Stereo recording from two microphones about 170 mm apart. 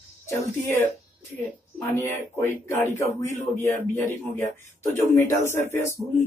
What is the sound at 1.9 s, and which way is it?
Speech, 15° left (ahead or behind).